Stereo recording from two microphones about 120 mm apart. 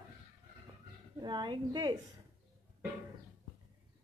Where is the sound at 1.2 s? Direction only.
35° right (ahead or behind).